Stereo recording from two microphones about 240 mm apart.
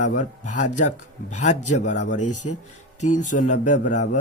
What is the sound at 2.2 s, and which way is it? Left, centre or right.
Speech, left.